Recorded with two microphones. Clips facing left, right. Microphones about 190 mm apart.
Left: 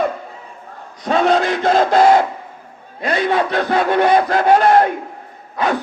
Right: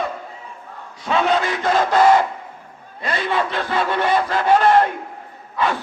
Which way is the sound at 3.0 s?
50° left (ahead or behind).